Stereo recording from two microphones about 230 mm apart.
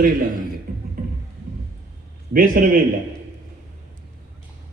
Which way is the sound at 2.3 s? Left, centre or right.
Right.